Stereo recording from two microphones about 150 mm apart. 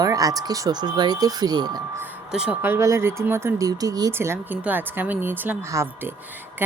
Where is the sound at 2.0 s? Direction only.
5° right (ahead or behind).